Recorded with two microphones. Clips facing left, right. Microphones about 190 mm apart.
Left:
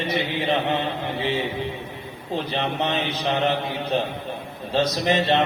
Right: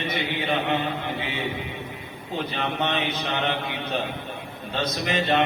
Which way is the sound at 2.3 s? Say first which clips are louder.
Left 2 dB; 30° left (ahead or behind).